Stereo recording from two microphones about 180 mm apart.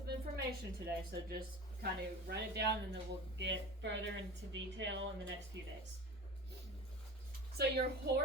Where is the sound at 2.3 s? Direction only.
70° right (ahead or behind).